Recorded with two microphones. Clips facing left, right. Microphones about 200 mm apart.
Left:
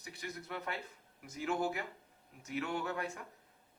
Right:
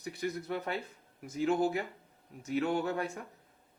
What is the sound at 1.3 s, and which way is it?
Speech, 30° right (ahead or behind).